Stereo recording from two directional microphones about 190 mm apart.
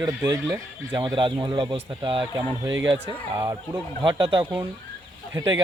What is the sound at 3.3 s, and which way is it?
Speech, 20° right (ahead or behind).